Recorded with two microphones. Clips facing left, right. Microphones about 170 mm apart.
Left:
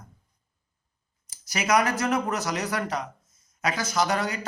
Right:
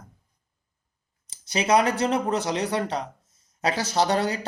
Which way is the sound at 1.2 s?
30° right (ahead or behind).